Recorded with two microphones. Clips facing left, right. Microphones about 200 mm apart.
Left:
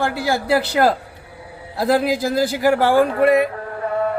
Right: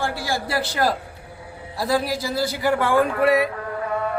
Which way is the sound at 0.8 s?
80° left.